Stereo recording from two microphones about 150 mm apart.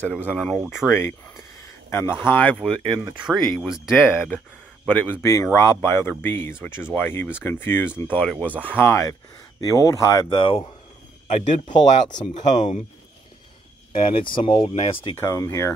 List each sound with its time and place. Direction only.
0.0 s speech: 10° left (ahead or behind)
2.8 s speech: 30° right (ahead or behind)
3.2 s speech: 5° right (ahead or behind)
4.8 s speech: 10° left (ahead or behind); by 10.7 s 30° left (ahead or behind)
11.2 s speech: 50° left (ahead or behind)
11.7 s speech: 30° left (ahead or behind)
13.9 s speech: 35° left (ahead or behind)
15.1 s speech: 20° left (ahead or behind)